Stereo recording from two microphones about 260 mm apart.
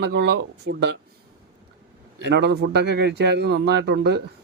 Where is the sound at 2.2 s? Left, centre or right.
Right.